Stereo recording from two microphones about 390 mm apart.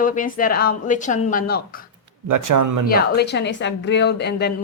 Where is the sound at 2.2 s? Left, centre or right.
Right.